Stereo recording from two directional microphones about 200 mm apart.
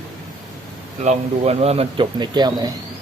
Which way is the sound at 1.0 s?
35° right (ahead or behind).